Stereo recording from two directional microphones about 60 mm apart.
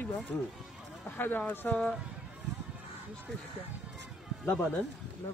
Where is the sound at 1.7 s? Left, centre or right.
Centre.